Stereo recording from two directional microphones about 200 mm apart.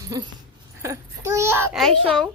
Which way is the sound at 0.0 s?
15° right (ahead or behind).